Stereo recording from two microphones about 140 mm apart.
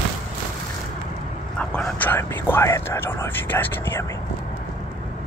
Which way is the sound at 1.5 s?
5° left (ahead or behind).